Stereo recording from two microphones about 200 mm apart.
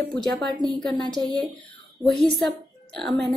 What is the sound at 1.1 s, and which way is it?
Speech, 20° right (ahead or behind).